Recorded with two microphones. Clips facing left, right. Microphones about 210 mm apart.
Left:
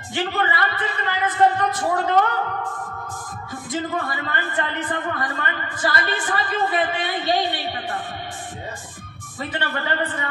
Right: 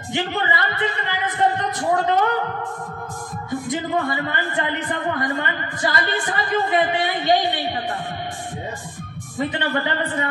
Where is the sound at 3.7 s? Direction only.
20° right (ahead or behind).